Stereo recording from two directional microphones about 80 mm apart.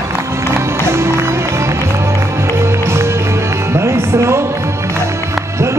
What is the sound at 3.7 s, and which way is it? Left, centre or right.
Music, right.